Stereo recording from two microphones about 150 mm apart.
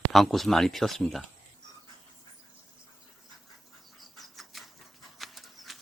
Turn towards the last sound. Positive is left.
turn(degrees=0)  # may be behind; listen again after turning